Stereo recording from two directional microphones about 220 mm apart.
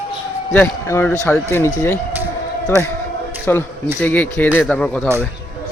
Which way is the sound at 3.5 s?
10° left (ahead or behind).